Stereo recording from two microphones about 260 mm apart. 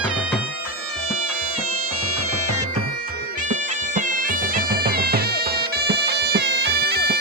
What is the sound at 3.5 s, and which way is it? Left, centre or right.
Bagpipes, right.